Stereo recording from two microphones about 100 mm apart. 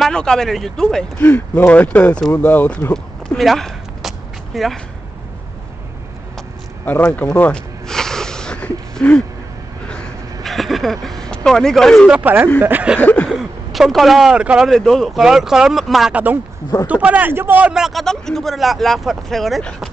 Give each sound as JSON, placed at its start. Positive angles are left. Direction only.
{"t": 0.0, "sound": "speech", "side_deg": 5}
{"t": 1.2, "sound": "speech", "side_deg": 20}
{"t": 2.9, "sound": "a sound", "side_deg": 5}
{"t": 4.5, "sound": "speech", "side_deg": 0}
{"t": 6.9, "sound": "speech", "side_deg": 15}
{"t": 7.9, "sound": "wheeze", "side_deg": 5}
{"t": 9.8, "sound": "a sound", "side_deg": 10}
{"t": 12.1, "sound": "speech", "side_deg": -15}
{"t": 13.0, "sound": "a sound", "side_deg": 15}
{"t": 13.3, "sound": "speech", "side_deg": 0}
{"t": 14.7, "sound": "speech", "side_deg": 5}
{"t": 16.8, "sound": "speech", "side_deg": -15}